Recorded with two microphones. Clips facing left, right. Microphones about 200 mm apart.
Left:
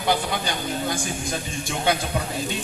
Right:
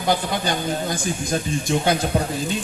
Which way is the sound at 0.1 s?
45° right (ahead or behind).